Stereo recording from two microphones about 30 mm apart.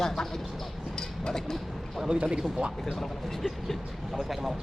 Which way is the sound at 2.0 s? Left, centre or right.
Right.